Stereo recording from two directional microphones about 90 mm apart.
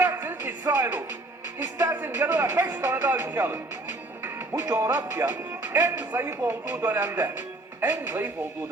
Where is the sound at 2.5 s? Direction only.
30° right (ahead or behind).